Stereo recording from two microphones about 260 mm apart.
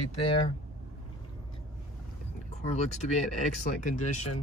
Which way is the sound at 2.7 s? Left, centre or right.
Left.